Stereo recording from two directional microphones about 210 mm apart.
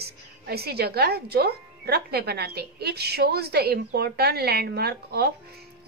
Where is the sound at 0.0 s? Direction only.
50° right (ahead or behind).